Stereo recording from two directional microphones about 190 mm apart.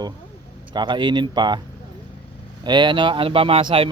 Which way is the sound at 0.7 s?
25° right (ahead or behind).